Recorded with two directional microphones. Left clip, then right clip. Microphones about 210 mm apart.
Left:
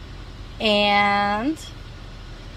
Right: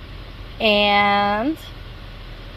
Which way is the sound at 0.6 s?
25° right (ahead or behind).